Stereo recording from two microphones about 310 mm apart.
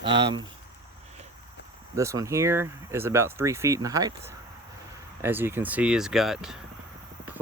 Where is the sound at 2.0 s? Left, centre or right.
Centre.